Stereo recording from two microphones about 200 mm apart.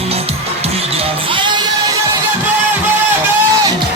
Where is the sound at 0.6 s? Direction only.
30° right (ahead or behind).